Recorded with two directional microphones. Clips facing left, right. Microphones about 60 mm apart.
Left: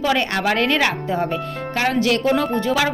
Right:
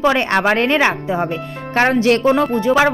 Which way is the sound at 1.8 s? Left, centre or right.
Right.